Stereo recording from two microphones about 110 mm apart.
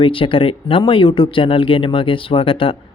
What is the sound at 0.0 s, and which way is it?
Speech, 50° left (ahead or behind).